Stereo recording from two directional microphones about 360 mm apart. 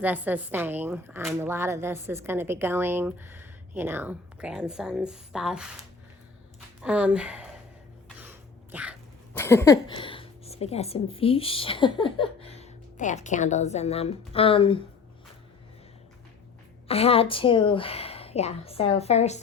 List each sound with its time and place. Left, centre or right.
0.0 s speech: centre
6.8 s speech: centre
8.2 s cat: centre
16.9 s speech: centre